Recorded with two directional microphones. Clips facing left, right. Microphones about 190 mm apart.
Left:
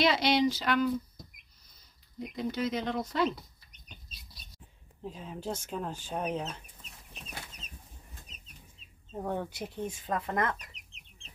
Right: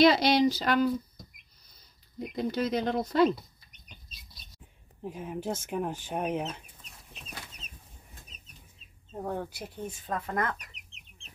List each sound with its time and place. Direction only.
0.0 s speech: 40° right (ahead or behind)
2.3 s speech: 40° right (ahead or behind)
5.0 s speech: 15° right (ahead or behind)
9.1 s speech: centre (ahead or behind)